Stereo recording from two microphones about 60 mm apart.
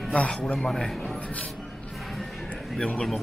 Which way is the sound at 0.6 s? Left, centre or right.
Centre.